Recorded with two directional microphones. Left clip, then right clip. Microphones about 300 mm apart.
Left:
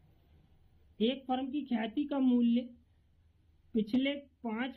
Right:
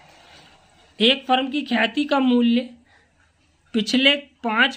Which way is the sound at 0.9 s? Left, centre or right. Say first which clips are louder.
Right 16 dB; right.